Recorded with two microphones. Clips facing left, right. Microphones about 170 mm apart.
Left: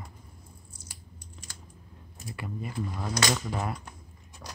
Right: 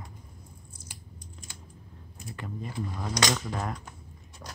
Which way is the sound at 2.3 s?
10° left (ahead or behind).